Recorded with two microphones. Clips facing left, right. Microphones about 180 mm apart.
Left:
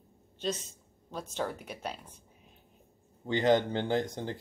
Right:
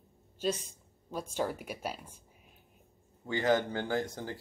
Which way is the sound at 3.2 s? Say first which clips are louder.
Left 3 dB; 20° left (ahead or behind).